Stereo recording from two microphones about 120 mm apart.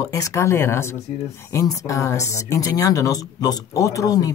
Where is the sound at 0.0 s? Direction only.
25° left (ahead or behind).